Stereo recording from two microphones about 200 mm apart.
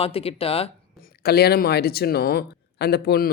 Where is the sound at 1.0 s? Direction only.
55° left (ahead or behind).